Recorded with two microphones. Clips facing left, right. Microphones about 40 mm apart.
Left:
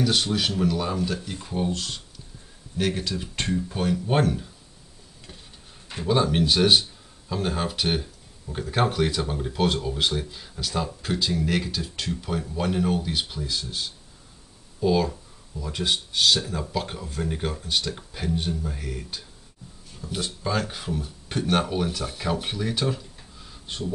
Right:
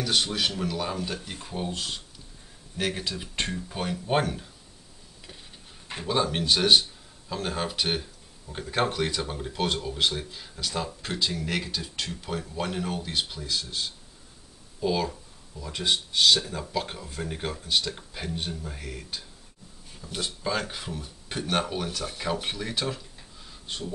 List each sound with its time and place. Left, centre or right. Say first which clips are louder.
0.0 s speech: left 3 dB; centre
1.4 s speech: left 6 dB; centre
1.7 s speech: left 3 dB; centre
6.0 s speech: left 4 dB; centre